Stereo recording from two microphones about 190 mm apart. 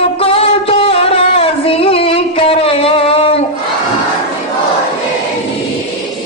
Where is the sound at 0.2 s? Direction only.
30° left (ahead or behind).